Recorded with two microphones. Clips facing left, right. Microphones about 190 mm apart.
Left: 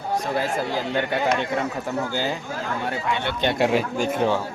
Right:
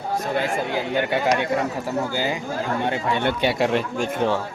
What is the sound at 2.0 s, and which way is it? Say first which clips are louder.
Speech: right 1 dB; 10° right (ahead or behind).